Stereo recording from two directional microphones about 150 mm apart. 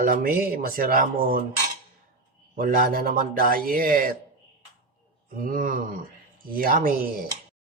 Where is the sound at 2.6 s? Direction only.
75° right (ahead or behind).